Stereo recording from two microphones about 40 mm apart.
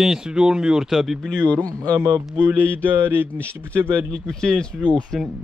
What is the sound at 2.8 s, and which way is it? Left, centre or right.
Speech, right.